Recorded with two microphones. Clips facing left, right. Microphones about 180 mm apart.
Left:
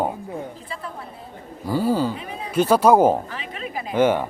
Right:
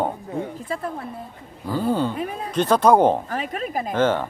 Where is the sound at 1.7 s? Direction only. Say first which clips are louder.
Left 1 dB; 10° left (ahead or behind).